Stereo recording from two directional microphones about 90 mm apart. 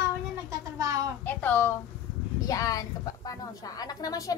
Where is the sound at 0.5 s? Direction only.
40° right (ahead or behind).